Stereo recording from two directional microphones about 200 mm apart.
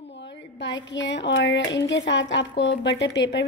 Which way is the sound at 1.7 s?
65° left (ahead or behind).